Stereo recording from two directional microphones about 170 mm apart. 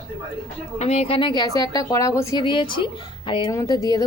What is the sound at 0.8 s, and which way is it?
A woman's voice, 35° left (ahead or behind).